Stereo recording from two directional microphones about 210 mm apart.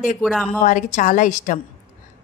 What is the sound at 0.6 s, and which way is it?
Speech, 35° left (ahead or behind).